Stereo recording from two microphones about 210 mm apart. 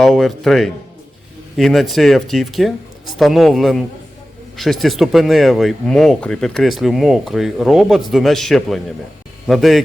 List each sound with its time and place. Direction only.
0.0 s speech: centre (ahead or behind)